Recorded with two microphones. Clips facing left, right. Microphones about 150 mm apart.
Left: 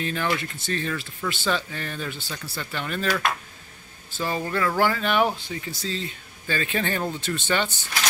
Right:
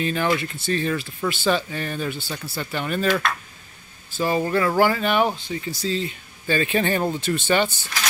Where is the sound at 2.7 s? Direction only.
15° right (ahead or behind).